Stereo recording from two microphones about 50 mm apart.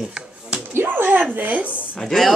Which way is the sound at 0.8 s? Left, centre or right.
Right.